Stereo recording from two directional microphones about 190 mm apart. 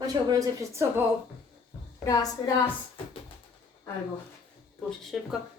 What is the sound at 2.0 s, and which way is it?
Speech, 20° left (ahead or behind).